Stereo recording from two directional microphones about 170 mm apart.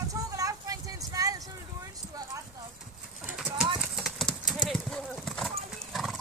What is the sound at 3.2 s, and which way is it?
Clip-clop, 5° right (ahead or behind).